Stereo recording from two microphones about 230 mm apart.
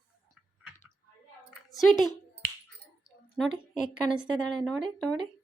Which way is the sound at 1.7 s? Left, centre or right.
Centre.